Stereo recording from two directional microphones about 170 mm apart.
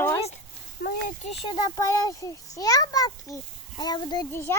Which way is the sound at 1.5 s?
25° left (ahead or behind).